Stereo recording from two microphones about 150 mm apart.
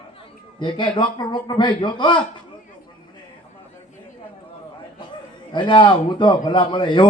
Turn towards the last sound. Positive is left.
turn(degrees=35)  # may be behind; listen again after turning